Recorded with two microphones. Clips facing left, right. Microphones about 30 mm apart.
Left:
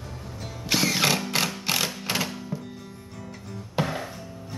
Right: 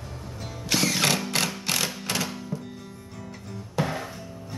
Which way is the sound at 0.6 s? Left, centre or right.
Centre.